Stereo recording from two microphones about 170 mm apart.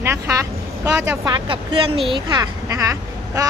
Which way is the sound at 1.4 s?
30° right (ahead or behind).